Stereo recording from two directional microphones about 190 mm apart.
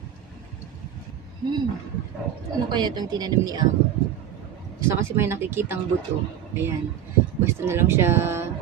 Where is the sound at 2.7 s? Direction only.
25° right (ahead or behind).